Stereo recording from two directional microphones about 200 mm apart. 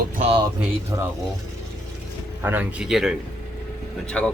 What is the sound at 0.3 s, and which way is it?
Speech, 20° right (ahead or behind).